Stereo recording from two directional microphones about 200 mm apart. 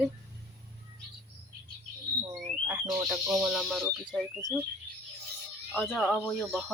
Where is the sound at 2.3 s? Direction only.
15° right (ahead or behind).